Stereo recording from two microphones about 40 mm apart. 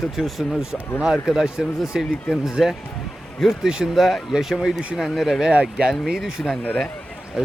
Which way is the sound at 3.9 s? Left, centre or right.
Centre.